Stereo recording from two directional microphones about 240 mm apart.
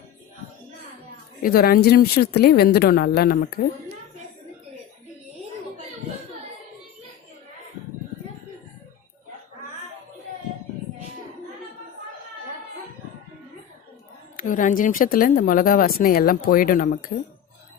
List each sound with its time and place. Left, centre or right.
1.4 s a woman's voice: left
14.3 s a woman's voice: left